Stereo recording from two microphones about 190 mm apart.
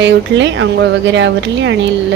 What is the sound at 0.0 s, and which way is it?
Speech, 70° right (ahead or behind).